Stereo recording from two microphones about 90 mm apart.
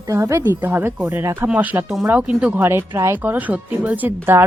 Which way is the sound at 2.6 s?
30° right (ahead or behind).